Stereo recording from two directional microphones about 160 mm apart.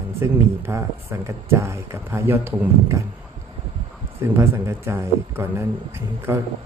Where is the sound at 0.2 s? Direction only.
15° right (ahead or behind).